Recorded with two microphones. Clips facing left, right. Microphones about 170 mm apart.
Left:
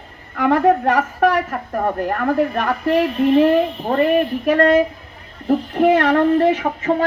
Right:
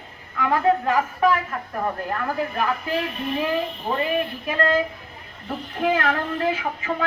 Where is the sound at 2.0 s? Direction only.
60° left (ahead or behind).